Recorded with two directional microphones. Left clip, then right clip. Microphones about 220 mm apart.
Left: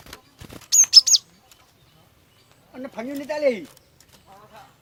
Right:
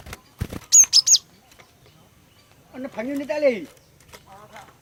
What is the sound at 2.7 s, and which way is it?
Speech, 20° left (ahead or behind).